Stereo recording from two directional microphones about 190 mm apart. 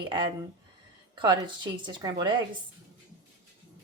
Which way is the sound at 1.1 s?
25° right (ahead or behind).